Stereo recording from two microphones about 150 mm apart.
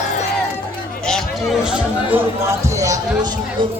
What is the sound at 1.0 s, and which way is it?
Speech, 5° left (ahead or behind).